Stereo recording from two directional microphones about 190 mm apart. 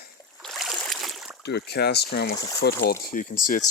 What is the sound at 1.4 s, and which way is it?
Speech, 60° left (ahead or behind).